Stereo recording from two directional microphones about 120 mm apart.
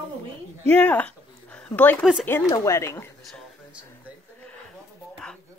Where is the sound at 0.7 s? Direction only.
10° left (ahead or behind).